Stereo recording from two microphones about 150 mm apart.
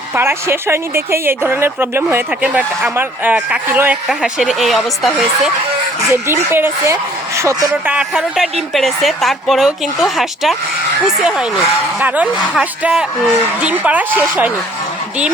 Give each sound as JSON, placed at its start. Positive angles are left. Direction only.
{"t": 0.1, "sound": "speech", "side_deg": -15}
{"t": 6.1, "sound": "speech", "side_deg": -15}
{"t": 7.7, "sound": "a woman's voice", "side_deg": -10}